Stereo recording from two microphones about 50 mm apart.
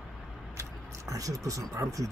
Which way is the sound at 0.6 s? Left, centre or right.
Right.